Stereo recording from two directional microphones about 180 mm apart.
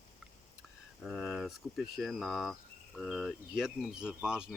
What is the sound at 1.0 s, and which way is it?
Speech, centre (ahead or behind).